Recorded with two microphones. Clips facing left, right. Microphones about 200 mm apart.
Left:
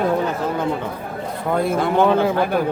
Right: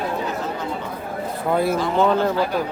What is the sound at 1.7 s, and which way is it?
Speech, 55° left (ahead or behind).